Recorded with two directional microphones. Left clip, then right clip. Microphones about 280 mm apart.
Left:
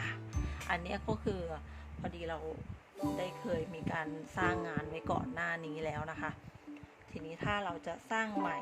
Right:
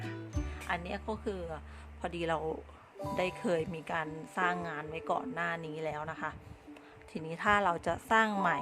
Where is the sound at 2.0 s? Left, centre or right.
Right.